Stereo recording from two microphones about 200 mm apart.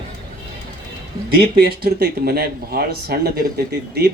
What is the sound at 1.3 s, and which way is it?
Speech, 50° right (ahead or behind).